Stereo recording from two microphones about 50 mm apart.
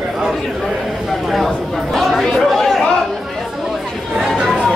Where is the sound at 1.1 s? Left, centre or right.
Centre.